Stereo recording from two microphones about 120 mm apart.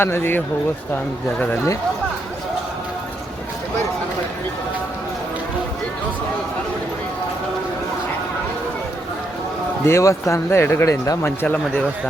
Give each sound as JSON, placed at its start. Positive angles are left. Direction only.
{"t": 0.0, "sound": "speech", "side_deg": 20}
{"t": 9.8, "sound": "speech", "side_deg": 25}